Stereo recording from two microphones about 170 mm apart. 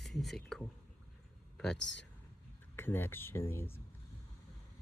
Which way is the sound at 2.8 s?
10° left (ahead or behind).